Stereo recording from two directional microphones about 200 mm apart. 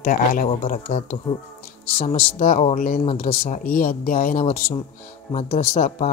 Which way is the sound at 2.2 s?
40° left (ahead or behind).